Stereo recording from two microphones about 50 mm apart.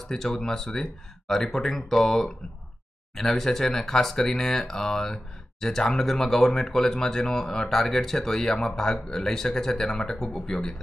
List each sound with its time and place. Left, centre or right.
0.0 s speech: centre